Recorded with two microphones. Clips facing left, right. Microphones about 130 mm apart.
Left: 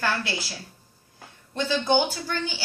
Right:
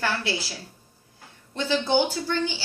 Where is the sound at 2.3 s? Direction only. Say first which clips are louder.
Right 4 dB; 25° right (ahead or behind).